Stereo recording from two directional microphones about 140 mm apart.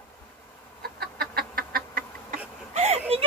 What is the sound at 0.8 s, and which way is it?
Chicken, 90° right.